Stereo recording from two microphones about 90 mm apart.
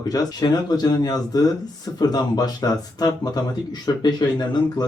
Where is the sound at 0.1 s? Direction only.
45° left (ahead or behind).